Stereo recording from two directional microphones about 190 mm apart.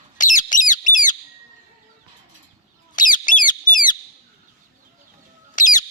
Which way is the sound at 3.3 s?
45° left (ahead or behind).